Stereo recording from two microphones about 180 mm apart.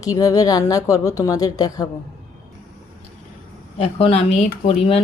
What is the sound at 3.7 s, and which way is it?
Speech, 30° left (ahead or behind).